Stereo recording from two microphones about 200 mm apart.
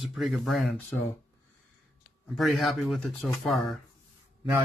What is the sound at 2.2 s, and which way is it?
Speech, centre (ahead or behind).